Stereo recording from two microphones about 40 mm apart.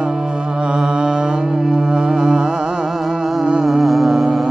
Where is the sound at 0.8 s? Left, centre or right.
Centre.